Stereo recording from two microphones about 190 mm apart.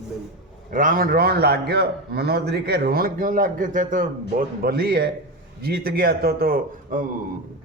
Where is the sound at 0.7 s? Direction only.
45° right (ahead or behind).